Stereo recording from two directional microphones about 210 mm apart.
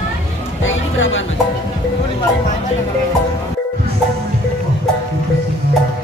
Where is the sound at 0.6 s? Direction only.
65° left (ahead or behind).